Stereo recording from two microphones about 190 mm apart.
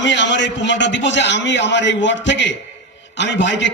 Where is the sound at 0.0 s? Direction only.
70° left (ahead or behind).